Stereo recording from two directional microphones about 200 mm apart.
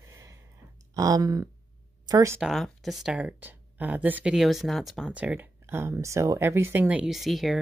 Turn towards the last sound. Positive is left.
turn(degrees=0)  # may be behind; listen again after turning